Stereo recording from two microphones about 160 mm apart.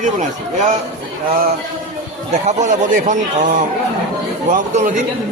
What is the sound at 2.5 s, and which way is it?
A man's voice, 50° right (ahead or behind).